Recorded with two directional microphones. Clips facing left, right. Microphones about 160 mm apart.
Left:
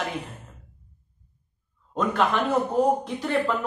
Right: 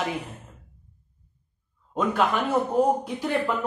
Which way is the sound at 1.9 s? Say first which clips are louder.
Even; 5° right (ahead or behind).